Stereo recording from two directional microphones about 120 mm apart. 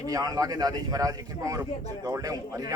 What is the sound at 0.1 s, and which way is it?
A man's voice, 30° right (ahead or behind).